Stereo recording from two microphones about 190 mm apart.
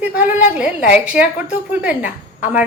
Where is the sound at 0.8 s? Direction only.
40° left (ahead or behind).